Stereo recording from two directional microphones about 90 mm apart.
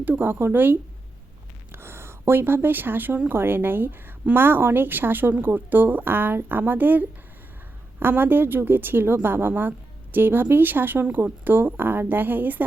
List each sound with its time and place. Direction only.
0.0 s a woman's voice: 20° right (ahead or behind)